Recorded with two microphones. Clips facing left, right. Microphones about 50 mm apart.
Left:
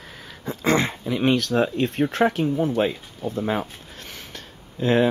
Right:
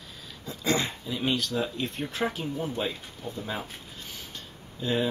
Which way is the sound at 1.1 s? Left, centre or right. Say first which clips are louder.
Left 8 dB; left.